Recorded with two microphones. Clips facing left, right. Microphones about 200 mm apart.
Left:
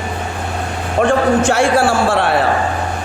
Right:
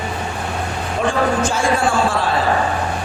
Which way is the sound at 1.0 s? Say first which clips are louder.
Left 5 dB; 70° left (ahead or behind).